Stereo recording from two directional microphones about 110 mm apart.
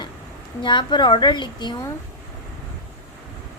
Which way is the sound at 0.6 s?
45° left (ahead or behind).